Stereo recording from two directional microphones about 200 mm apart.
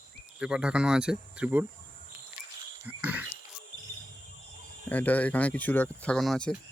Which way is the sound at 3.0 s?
10° right (ahead or behind).